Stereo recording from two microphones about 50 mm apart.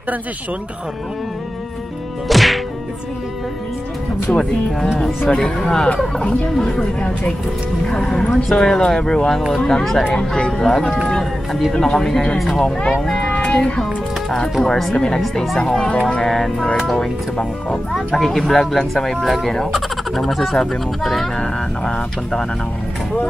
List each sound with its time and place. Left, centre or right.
2.2 s whack: centre
5.3 s speech: centre
18.1 s speech: centre